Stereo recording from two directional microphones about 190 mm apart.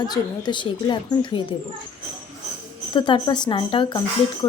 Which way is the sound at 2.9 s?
25° left (ahead or behind).